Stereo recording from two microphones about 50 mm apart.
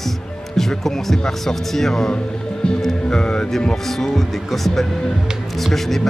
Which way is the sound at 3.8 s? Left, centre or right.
Centre.